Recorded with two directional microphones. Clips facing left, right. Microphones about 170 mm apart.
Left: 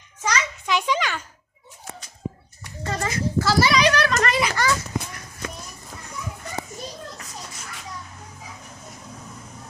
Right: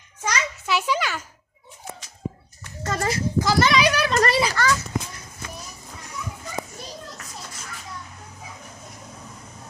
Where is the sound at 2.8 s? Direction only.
45° right (ahead or behind).